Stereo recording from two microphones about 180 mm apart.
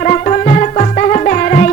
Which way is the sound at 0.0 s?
40° left (ahead or behind).